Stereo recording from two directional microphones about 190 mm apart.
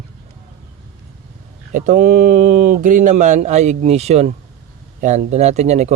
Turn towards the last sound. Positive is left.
turn(degrees=-35)  # may be behind; listen again after turning